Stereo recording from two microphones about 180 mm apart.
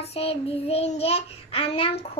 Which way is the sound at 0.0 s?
35° left (ahead or behind).